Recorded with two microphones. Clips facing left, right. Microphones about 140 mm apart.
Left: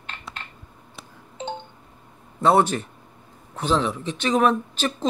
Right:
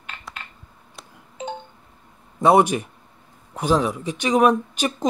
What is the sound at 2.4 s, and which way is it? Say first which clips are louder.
A man's voice: right 3 dB; 15° right (ahead or behind).